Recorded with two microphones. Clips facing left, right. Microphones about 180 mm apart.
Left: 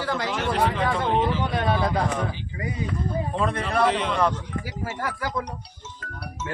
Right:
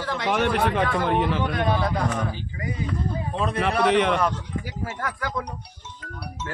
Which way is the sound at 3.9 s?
65° right (ahead or behind).